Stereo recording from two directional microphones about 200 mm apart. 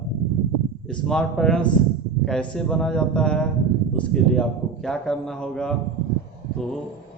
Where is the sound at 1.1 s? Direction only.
Centre (ahead or behind).